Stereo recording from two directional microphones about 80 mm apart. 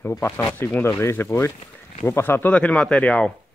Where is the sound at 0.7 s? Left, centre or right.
Left.